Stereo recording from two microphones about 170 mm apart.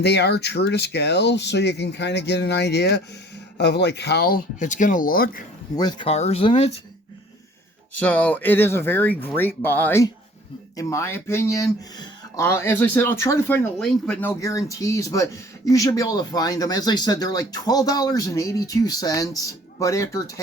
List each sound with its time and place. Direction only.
0.0 s speech: 75° left (ahead or behind); by 5.4 s 60° left (ahead or behind)
5.7 s speech: 25° left (ahead or behind)
7.9 s speech: 10° left (ahead or behind)